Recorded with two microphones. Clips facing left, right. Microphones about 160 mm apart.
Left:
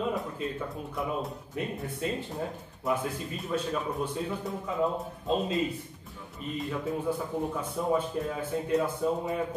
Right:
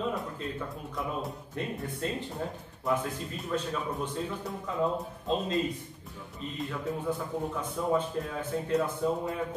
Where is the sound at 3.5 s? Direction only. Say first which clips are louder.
Left 1 dB; 5° left (ahead or behind).